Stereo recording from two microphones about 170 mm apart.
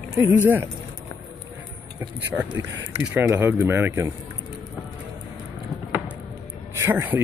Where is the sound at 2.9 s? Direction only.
10° right (ahead or behind).